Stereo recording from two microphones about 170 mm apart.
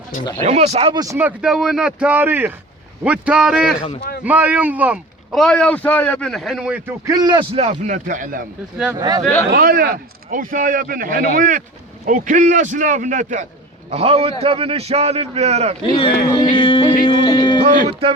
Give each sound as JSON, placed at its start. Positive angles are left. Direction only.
{"t": 0.4, "sound": "a man's voice", "side_deg": -40}
{"t": 0.9, "sound": "speech", "side_deg": -15}
{"t": 1.4, "sound": "speech", "side_deg": -5}
{"t": 9.0, "sound": "speech", "side_deg": -20}
{"t": 9.5, "sound": "a man's voice", "side_deg": -60}
{"t": 15.8, "sound": "speech", "side_deg": 30}